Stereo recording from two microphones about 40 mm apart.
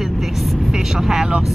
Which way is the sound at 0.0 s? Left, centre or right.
Centre.